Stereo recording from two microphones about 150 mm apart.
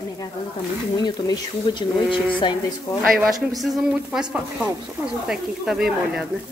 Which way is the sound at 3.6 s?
Centre (ahead or behind).